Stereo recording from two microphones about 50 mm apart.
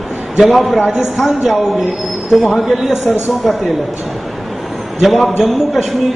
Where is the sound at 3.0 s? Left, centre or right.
Left.